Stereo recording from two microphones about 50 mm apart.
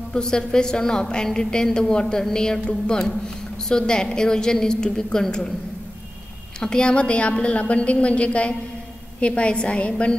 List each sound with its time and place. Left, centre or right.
0.1 s a woman's voice: centre
3.6 s a woman's voice: centre
6.6 s a woman's voice: centre